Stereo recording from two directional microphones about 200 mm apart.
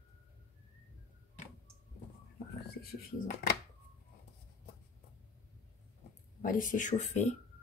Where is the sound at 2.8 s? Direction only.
50° left (ahead or behind).